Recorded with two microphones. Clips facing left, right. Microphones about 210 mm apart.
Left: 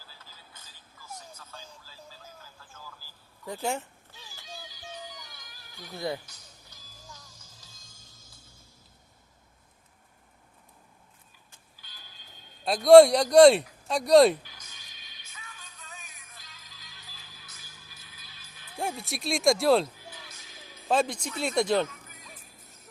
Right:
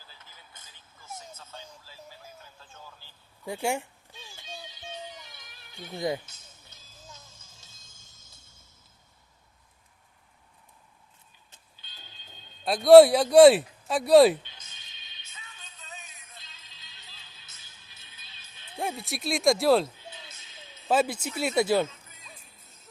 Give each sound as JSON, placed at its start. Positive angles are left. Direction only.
{"t": 0.0, "sound": "vehicle", "side_deg": -20}
{"t": 3.4, "sound": "speech", "side_deg": -10}
{"t": 4.1, "sound": "music", "side_deg": -25}
{"t": 11.5, "sound": "a sound", "side_deg": -25}
{"t": 12.6, "sound": "speech", "side_deg": 0}
{"t": 14.4, "sound": "music", "side_deg": -25}
{"t": 18.8, "sound": "speech", "side_deg": 0}
{"t": 20.0, "sound": "music", "side_deg": -25}
{"t": 20.9, "sound": "speech", "side_deg": -5}
{"t": 21.8, "sound": "music", "side_deg": -25}